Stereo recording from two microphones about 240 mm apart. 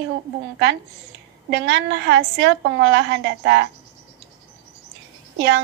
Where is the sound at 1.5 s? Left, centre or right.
Right.